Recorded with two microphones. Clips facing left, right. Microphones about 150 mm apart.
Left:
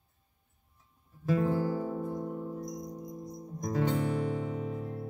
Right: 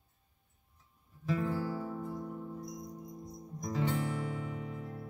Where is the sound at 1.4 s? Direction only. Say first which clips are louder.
Left 5 dB; 50° left (ahead or behind).